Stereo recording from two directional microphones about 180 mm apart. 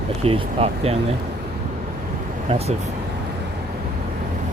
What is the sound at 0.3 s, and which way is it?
Speech, 35° right (ahead or behind).